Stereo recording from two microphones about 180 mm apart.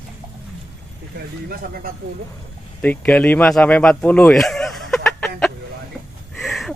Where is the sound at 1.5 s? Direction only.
55° right (ahead or behind).